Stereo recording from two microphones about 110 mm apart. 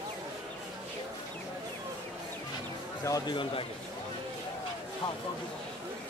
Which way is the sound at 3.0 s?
35° left (ahead or behind).